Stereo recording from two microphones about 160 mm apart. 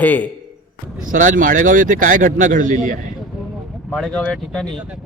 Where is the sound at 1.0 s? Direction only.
55° right (ahead or behind).